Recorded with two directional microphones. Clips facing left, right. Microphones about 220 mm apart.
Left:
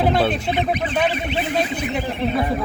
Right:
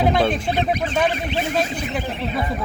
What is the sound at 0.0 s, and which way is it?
Fowl, 5° left (ahead or behind).